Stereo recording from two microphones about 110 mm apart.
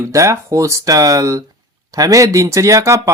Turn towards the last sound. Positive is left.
turn(degrees=-25)  # may be behind; listen again after turning